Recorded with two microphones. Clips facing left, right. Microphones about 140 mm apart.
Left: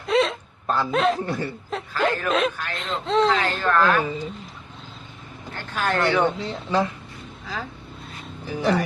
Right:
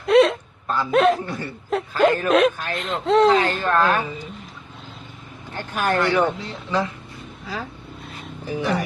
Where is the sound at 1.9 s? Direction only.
20° right (ahead or behind).